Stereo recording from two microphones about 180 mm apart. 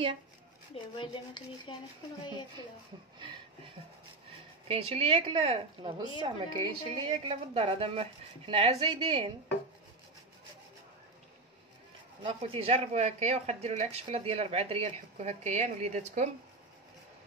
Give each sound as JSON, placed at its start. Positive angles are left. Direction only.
{"t": 0.9, "sound": "rub", "side_deg": 25}
{"t": 4.6, "sound": "a woman's voice", "side_deg": -35}
{"t": 12.2, "sound": "speech", "side_deg": -30}